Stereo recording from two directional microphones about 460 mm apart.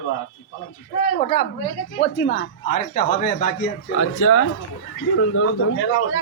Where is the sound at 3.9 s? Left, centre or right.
Left.